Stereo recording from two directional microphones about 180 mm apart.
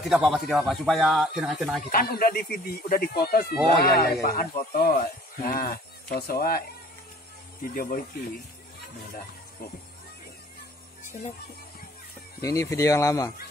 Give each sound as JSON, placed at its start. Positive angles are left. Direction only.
{"t": 0.0, "sound": "speech", "side_deg": 0}
{"t": 1.9, "sound": "speech", "side_deg": 55}
{"t": 7.6, "sound": "speech", "side_deg": 50}
{"t": 12.4, "sound": "speech", "side_deg": 20}